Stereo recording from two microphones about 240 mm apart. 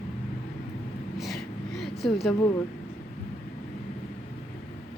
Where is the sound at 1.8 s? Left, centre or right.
Centre.